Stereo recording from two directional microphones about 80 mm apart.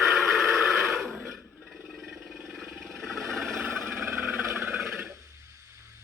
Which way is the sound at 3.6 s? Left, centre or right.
Right.